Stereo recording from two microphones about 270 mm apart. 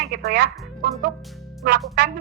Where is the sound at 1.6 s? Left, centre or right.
Right.